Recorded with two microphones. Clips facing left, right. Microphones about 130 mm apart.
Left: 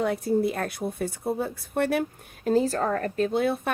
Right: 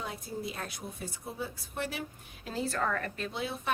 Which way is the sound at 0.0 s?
60° left (ahead or behind).